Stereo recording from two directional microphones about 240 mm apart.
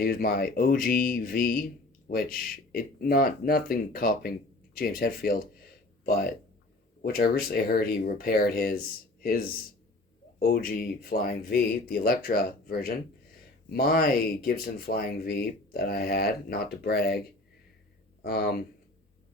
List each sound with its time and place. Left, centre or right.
0.0 s speech: left
7.0 s speech: left